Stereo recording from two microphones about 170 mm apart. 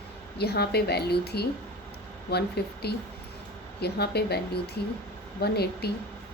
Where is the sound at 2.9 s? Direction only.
70° left (ahead or behind).